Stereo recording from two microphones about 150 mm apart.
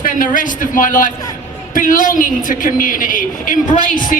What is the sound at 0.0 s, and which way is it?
A man's voice, 65° left (ahead or behind).